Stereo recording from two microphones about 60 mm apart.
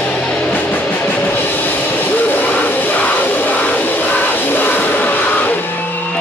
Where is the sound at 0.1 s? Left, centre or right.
Centre.